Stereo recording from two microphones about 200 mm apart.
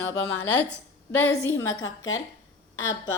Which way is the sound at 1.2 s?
10° left (ahead or behind).